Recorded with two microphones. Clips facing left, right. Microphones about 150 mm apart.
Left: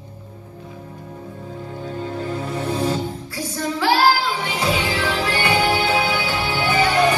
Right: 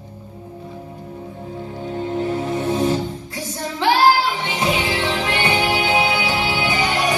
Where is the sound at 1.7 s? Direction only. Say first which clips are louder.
Right 4 dB; 20° right (ahead or behind).